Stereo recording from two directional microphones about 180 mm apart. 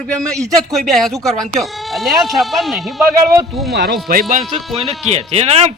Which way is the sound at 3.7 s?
65° right (ahead or behind).